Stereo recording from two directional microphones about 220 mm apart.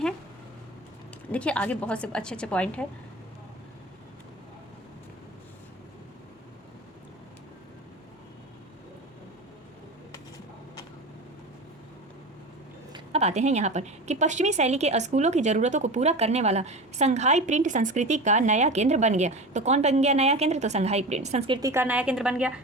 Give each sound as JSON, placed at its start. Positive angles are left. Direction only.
{"t": 1.3, "sound": "a woman's voice", "side_deg": 5}
{"t": 12.9, "sound": "a woman's voice", "side_deg": -30}